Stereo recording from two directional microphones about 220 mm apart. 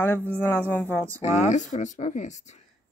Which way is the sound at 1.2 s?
35° left (ahead or behind).